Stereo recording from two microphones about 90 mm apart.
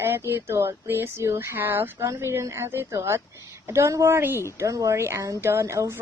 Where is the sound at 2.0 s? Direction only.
30° right (ahead or behind).